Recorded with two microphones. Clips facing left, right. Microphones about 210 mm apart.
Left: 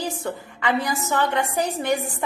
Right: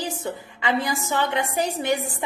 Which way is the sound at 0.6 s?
20° right (ahead or behind).